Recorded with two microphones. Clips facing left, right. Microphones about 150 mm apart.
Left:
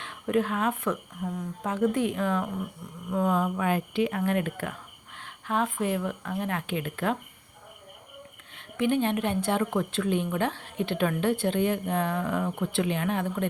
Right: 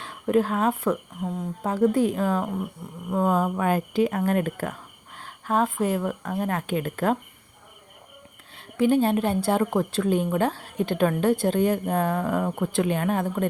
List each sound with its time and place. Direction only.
0.0 s speech: 35° right (ahead or behind)
1.2 s speech: 25° right (ahead or behind)
1.7 s a woman's voice: 35° right (ahead or behind)
8.5 s a woman's voice: 35° right (ahead or behind)